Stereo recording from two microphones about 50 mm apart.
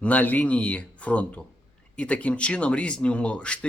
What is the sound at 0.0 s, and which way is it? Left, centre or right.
Speech, left.